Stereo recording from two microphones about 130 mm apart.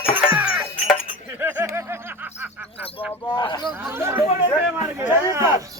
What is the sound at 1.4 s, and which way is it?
Snicker, 15° right (ahead or behind).